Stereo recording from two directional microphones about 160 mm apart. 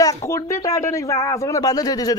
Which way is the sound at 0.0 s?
20° left (ahead or behind).